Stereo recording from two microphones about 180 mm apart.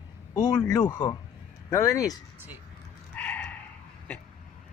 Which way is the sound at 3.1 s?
10° left (ahead or behind).